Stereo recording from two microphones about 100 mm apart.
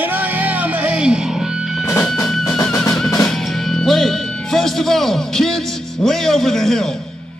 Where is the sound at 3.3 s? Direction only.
5° left (ahead or behind).